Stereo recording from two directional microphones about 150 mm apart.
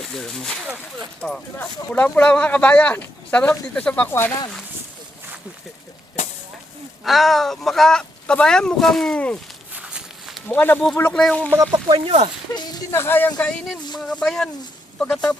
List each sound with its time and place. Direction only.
0.1 s speech: 5° left (ahead or behind)
7.0 s speech: centre (ahead or behind)
9.7 s walk: 5° right (ahead or behind)
10.5 s speech: 10° left (ahead or behind)
11.7 s speech: 35° right (ahead or behind)
12.5 s speech: 25° left (ahead or behind)
13.0 s speech: 15° left (ahead or behind)
14.0 s speech: 5° left (ahead or behind)